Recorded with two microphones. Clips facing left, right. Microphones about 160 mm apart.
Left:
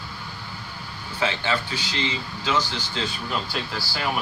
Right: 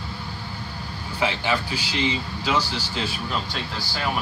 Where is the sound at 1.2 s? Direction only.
10° right (ahead or behind).